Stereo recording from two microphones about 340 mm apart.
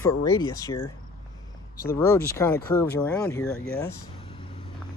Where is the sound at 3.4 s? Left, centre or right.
Left.